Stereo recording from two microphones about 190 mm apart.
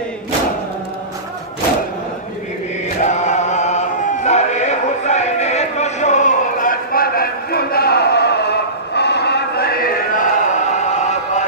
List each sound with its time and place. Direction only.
3.0 s chant: 40° left (ahead or behind)